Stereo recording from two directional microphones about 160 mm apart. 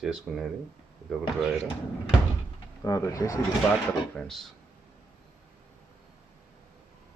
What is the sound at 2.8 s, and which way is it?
Speech, 20° left (ahead or behind).